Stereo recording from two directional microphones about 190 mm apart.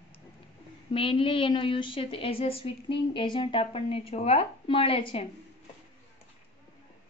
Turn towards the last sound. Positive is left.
turn(degrees=30)  # may be behind; listen again after turning